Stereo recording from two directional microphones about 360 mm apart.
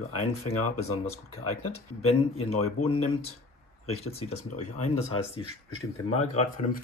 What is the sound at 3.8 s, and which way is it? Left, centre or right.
Speech, centre.